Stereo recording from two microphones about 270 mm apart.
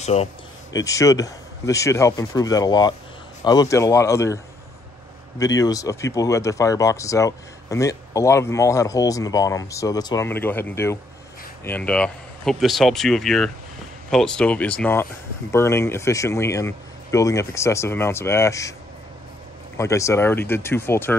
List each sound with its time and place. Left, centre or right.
0.0 s speech: left
0.7 s speech: centre
5.4 s speech: centre
19.8 s speech: centre